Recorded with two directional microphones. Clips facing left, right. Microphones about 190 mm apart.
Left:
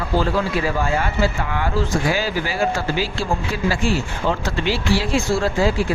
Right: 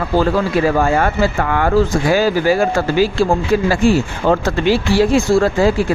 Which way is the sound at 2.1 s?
45° right (ahead or behind).